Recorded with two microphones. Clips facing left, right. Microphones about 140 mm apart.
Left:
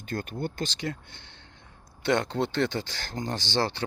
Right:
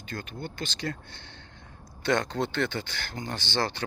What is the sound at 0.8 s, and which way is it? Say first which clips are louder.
Speech: even; 20° left (ahead or behind).